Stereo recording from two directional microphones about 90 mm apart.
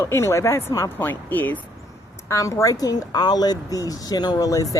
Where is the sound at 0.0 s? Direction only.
30° left (ahead or behind).